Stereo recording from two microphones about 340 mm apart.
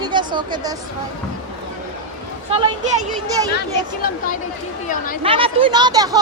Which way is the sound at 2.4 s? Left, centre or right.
Centre.